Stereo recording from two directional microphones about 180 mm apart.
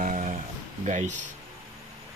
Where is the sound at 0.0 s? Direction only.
45° right (ahead or behind).